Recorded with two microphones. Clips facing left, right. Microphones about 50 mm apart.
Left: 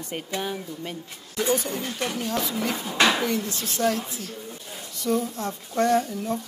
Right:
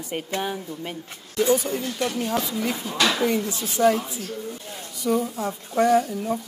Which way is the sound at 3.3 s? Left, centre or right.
Centre.